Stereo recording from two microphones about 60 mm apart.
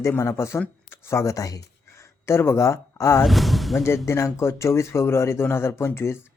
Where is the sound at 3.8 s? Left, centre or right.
Left.